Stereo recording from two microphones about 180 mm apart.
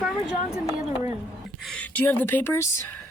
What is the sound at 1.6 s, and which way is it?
Speech, 5° left (ahead or behind).